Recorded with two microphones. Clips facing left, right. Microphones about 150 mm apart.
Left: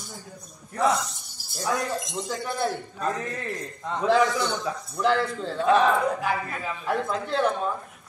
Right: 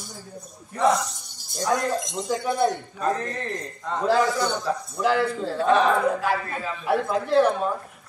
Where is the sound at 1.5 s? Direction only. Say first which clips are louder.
Right 4 dB; centre (ahead or behind).